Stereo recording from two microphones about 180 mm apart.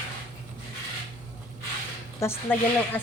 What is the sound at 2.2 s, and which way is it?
Speech, 10° left (ahead or behind).